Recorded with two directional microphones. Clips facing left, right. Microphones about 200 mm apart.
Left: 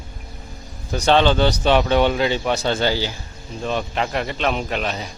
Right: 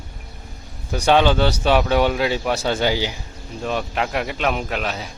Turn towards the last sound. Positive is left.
turn(degrees=-5)  # may be behind; listen again after turning